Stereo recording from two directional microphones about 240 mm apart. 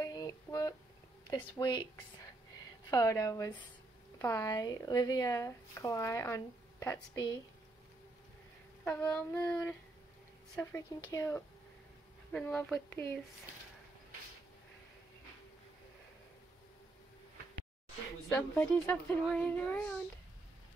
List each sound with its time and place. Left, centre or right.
0.0 s a sound: centre
1.2 s speech: centre
8.8 s child singing: centre
10.5 s speech: centre
12.3 s child singing: centre
18.3 s speech: centre